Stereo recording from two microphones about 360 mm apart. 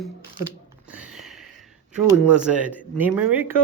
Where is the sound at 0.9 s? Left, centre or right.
Centre.